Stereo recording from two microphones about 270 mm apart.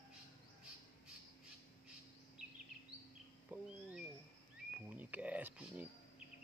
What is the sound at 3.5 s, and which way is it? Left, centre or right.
Cat, centre.